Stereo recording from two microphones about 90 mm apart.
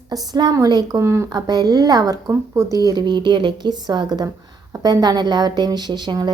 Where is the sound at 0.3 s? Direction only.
50° right (ahead or behind).